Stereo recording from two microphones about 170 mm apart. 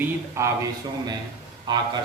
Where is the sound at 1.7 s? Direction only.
25° right (ahead or behind).